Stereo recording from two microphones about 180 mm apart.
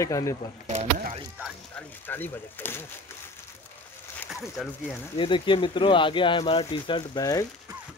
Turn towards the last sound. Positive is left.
turn(degrees=20)  # may be behind; listen again after turning